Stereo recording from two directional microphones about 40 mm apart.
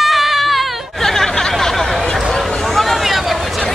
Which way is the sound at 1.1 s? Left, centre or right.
Centre.